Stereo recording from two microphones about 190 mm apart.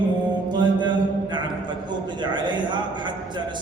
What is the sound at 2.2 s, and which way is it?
Speech, 25° right (ahead or behind).